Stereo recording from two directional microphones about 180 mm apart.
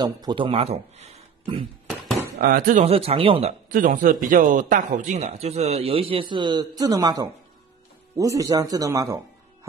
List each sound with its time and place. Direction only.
0.0 s speech: 25° right (ahead or behind)
2.3 s speech: 55° right (ahead or behind)
2.8 s speech: 35° right (ahead or behind)
3.7 s speech: 50° right (ahead or behind); by 9.2 s 20° right (ahead or behind)